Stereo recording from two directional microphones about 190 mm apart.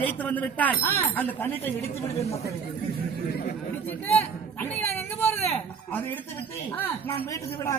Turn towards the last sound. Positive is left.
turn(degrees=10)  # may be behind; listen again after turning